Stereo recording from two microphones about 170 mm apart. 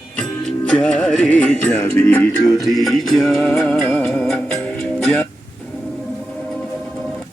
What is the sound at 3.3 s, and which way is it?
Music, 15° left (ahead or behind).